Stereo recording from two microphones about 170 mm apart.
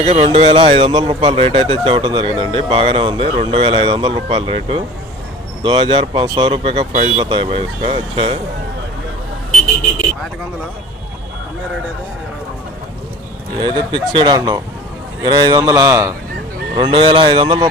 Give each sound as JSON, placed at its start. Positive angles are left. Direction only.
{"t": 0.0, "sound": "speech", "side_deg": -40}
{"t": 13.7, "sound": "a man's voice", "side_deg": -30}
{"t": 16.7, "sound": "speech", "side_deg": -30}